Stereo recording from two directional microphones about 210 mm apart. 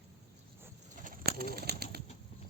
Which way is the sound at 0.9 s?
40° right (ahead or behind).